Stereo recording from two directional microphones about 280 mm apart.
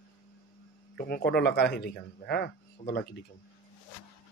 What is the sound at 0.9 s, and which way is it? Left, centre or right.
Speech, left.